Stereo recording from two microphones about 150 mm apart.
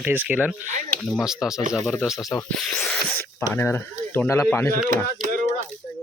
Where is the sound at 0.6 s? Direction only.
55° right (ahead or behind).